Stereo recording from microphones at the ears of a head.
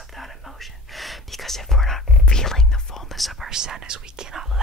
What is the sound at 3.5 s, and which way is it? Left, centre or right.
Speech, right.